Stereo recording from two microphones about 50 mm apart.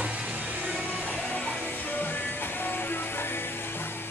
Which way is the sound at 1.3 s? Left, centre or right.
Left.